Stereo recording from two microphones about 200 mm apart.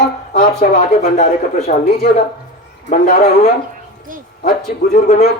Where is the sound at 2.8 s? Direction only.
40° left (ahead or behind).